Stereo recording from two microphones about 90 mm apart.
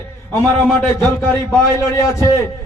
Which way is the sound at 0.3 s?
25° left (ahead or behind).